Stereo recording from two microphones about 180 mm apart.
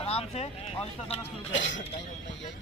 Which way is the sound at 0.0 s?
35° left (ahead or behind).